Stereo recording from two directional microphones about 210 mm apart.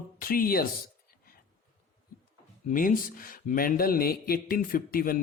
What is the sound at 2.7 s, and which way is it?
Speech, 40° left (ahead or behind).